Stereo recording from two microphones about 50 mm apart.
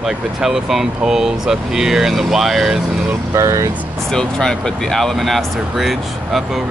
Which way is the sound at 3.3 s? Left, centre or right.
Right.